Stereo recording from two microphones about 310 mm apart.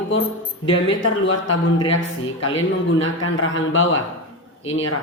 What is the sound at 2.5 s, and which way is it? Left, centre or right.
A man's voice, left.